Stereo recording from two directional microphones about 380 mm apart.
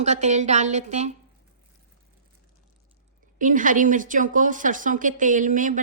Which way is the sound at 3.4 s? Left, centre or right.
Right.